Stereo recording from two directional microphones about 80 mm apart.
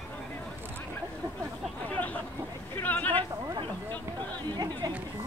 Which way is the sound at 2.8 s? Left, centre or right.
Left.